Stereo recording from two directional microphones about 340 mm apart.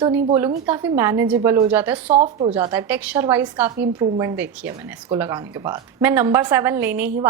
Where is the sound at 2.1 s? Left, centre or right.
Centre.